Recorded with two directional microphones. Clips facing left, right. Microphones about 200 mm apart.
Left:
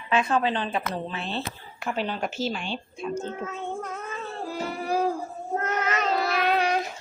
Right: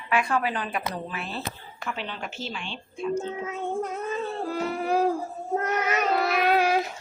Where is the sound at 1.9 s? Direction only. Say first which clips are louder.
Left 6 dB; 40° left (ahead or behind).